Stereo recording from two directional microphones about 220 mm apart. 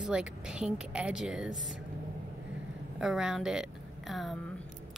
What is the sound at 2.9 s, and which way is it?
A woman's voice, centre (ahead or behind).